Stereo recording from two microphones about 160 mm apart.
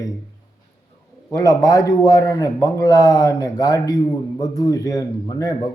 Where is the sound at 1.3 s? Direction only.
25° left (ahead or behind).